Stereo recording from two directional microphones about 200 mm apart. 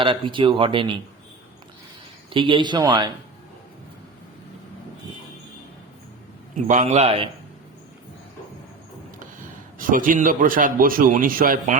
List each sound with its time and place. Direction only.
0.0 s speech: 25° right (ahead or behind)
2.3 s speech: 25° right (ahead or behind)
6.7 s a man's voice: 35° right (ahead or behind)
9.7 s a man's voice: 45° right (ahead or behind)